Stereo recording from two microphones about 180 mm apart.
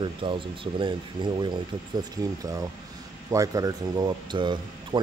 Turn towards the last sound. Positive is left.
turn(degrees=-25)  # may be behind; listen again after turning